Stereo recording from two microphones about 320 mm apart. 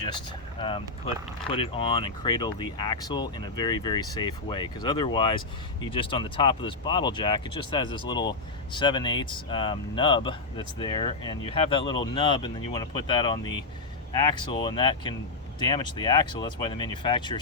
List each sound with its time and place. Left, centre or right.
0.6 s speech: centre